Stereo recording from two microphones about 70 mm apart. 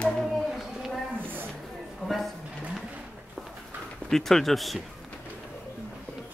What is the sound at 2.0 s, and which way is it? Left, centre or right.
Speech, centre.